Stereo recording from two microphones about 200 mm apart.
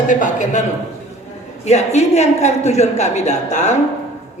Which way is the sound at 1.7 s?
35° left (ahead or behind).